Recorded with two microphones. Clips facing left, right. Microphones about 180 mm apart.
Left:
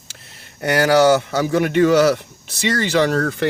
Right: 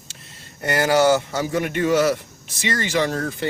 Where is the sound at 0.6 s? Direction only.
70° left (ahead or behind).